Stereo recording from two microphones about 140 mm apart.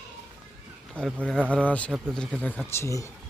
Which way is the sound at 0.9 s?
5° left (ahead or behind).